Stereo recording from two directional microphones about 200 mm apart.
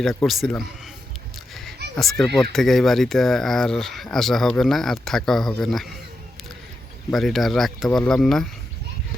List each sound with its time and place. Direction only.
0.0 s speech: centre (ahead or behind)
2.0 s speech: centre (ahead or behind)
7.1 s speech: centre (ahead or behind)